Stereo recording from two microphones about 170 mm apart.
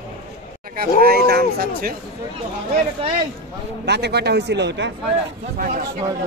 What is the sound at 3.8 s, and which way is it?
Speech, 80° right.